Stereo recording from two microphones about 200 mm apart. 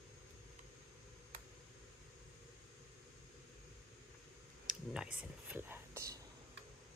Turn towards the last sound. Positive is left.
turn(degrees=-15)  # may be behind; listen again after turning